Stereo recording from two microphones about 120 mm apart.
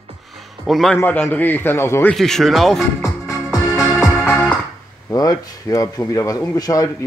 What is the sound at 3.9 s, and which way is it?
Music, 5° left (ahead or behind).